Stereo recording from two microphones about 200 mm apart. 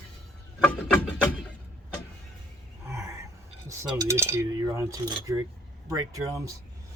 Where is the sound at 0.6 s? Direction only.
5° left (ahead or behind).